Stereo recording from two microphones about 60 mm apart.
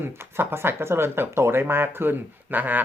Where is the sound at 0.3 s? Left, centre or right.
Right.